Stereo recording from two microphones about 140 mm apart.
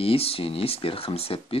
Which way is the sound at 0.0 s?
40° left (ahead or behind).